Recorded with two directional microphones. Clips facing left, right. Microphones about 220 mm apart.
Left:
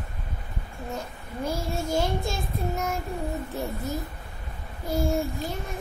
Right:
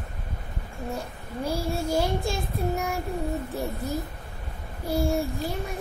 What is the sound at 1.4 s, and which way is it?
Child singing, 30° right (ahead or behind).